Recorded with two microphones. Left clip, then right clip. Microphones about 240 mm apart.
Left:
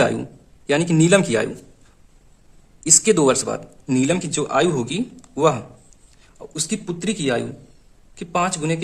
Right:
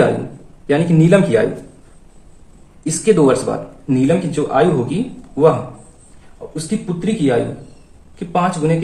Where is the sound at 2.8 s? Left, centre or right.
Left.